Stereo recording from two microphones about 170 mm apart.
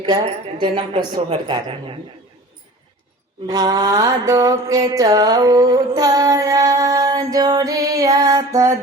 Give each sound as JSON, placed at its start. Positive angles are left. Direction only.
{"t": 0.6, "sound": "mantra", "side_deg": -30}
{"t": 3.4, "sound": "mantra", "side_deg": -25}